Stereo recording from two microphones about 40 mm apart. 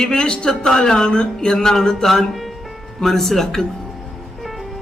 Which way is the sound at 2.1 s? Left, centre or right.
Centre.